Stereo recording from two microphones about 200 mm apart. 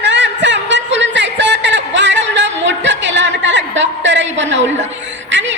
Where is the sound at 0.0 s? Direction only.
60° right (ahead or behind).